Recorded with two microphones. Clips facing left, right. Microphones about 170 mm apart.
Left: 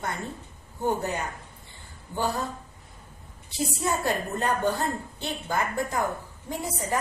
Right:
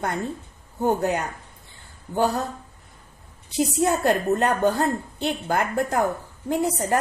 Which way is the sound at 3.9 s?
65° right (ahead or behind).